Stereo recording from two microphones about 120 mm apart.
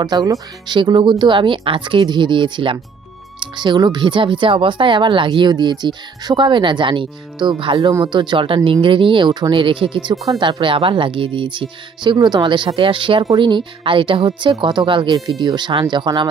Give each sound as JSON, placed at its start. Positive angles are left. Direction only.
{"t": 0.0, "sound": "speech", "side_deg": -35}